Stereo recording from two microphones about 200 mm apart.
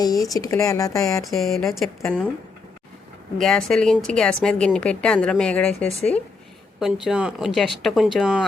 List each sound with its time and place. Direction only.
0.0 s speech: 20° left (ahead or behind)
1.4 s speech: centre (ahead or behind)
3.3 s speech: centre (ahead or behind)